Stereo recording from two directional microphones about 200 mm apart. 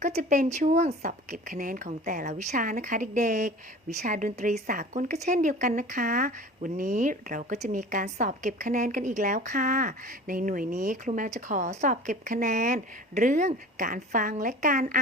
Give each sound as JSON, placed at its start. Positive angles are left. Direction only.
{"t": 0.0, "sound": "speech", "side_deg": -35}